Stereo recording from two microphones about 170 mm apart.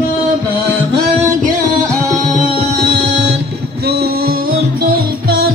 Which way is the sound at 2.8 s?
75° right (ahead or behind).